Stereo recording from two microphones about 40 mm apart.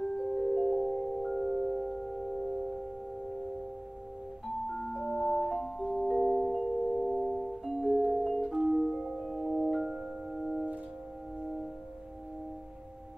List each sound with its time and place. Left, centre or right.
0.0 s music: centre
1.4 s singing bowl: right
1.8 s singing bowl: centre
4.6 s music: centre